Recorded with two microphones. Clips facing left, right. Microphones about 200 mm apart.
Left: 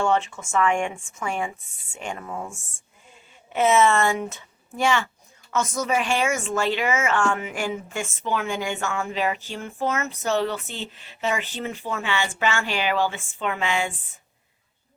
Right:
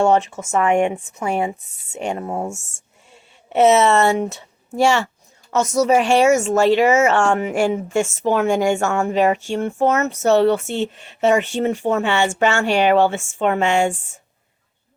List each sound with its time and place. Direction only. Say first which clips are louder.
0.0 s speech: right 6 dB; 40° right (ahead or behind)
2.5 s speech: right 11 dB; 75° right (ahead or behind)
3.6 s speech: right 5 dB; 40° right (ahead or behind)